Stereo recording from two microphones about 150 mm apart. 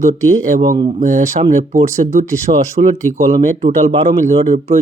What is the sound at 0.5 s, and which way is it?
Speech, 65° right (ahead or behind).